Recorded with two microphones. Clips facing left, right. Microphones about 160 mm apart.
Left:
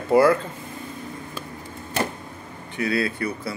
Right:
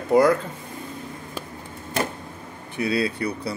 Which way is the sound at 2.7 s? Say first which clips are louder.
Even; 20° right (ahead or behind).